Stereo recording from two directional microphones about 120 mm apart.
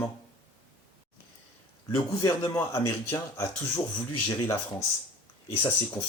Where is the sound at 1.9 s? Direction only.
35° left (ahead or behind).